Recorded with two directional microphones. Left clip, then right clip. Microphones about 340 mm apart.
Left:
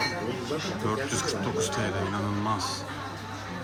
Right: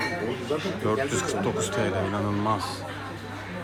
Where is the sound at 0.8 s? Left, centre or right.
Centre.